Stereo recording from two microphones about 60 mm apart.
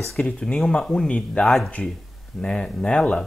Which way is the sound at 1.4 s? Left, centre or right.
Centre.